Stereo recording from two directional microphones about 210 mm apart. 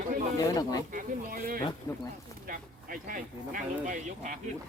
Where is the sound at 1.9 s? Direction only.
15° left (ahead or behind).